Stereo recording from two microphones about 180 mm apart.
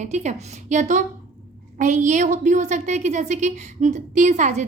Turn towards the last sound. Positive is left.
turn(degrees=-40)  # may be behind; listen again after turning